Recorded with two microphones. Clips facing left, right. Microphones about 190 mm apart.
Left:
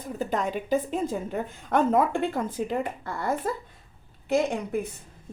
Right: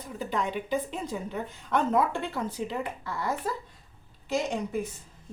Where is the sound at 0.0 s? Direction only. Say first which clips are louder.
Left 3 dB; 45° left (ahead or behind).